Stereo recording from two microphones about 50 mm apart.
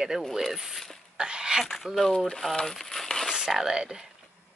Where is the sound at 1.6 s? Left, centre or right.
Centre.